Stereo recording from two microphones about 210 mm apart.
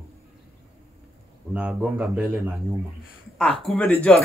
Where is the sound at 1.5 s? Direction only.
5° right (ahead or behind).